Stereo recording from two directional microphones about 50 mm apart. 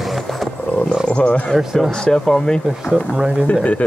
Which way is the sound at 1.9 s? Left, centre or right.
Centre.